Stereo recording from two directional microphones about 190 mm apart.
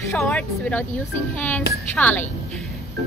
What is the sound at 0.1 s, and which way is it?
A woman's voice, 5° left (ahead or behind).